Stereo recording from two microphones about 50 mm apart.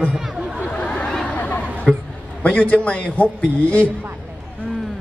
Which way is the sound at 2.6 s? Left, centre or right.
Left.